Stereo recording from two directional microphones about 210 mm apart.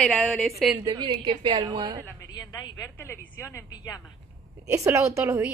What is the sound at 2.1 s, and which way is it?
A woman's voice, 15° left (ahead or behind).